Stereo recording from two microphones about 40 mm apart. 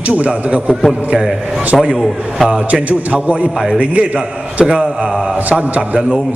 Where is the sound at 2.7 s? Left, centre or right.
Right.